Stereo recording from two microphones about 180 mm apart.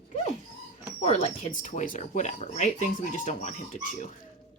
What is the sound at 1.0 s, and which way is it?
Speech, 40° left (ahead or behind).